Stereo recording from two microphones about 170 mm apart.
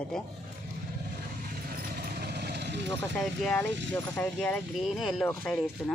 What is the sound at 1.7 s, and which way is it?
Vehicle, 65° right (ahead or behind).